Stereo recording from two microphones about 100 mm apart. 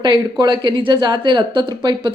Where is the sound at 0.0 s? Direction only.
50° right (ahead or behind).